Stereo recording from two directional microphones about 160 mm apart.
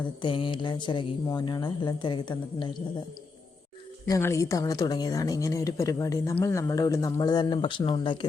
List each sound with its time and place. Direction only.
0.2 s speech: 30° left (ahead or behind)
4.0 s speech: 20° left (ahead or behind)